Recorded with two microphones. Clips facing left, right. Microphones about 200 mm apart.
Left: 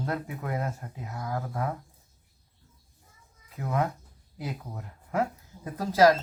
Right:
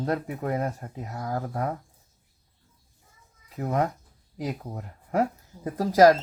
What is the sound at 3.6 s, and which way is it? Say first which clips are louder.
Speech: right 3 dB; 40° right (ahead or behind).